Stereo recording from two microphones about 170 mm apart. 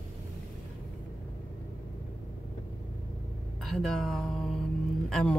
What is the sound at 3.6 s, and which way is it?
Speech, centre (ahead or behind).